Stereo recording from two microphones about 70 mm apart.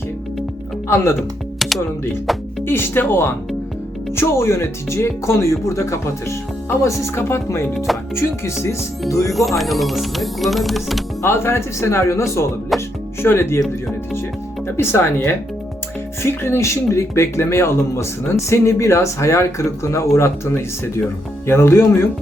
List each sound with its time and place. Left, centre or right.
2.6 s speech: left
9.5 s speech: centre
11.2 s speech: left
12.7 s music: centre
13.2 s speech: left
14.8 s speech: left